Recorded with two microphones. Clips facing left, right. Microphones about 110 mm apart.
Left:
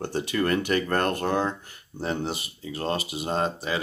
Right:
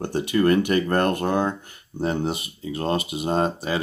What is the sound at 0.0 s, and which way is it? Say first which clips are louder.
Speech: right 5 dB; 15° right (ahead or behind).